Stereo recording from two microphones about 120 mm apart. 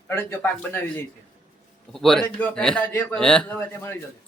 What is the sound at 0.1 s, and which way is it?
Speech, 20° left (ahead or behind).